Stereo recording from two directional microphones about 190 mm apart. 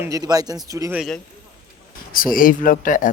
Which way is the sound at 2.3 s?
45° left (ahead or behind).